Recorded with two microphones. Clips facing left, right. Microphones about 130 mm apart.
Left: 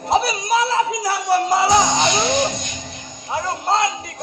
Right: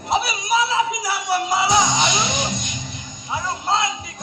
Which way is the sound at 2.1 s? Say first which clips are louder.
Left 5 dB; 55° left (ahead or behind).